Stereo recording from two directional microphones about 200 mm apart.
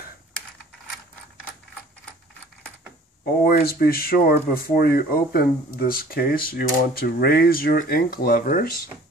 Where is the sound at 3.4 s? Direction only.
50° left (ahead or behind).